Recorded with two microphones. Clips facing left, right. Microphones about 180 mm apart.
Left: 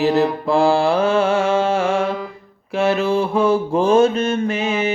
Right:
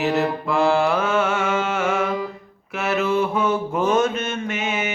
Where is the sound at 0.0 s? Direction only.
30° left (ahead or behind).